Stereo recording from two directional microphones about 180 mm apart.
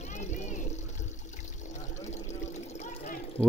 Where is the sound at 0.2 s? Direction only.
40° left (ahead or behind).